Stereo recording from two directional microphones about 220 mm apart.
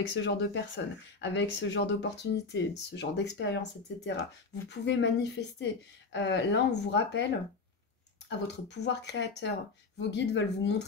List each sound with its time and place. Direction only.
0.1 s speech: 55° left (ahead or behind)
8.3 s speech: 50° left (ahead or behind)